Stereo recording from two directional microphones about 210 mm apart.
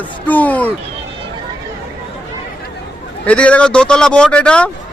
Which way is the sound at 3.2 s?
5° left (ahead or behind).